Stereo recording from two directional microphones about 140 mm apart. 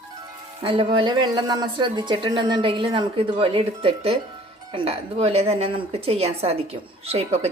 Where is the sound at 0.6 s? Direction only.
40° right (ahead or behind).